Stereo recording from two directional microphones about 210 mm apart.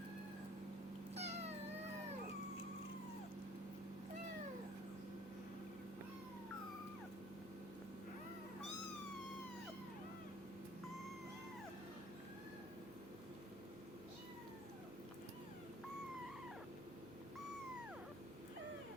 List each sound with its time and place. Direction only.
1.1 s cat: 30° right (ahead or behind)